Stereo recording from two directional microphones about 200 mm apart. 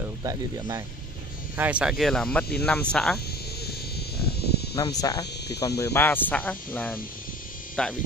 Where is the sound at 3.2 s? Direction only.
50° left (ahead or behind).